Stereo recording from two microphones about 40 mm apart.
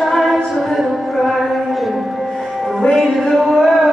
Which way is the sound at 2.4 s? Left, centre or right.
Centre.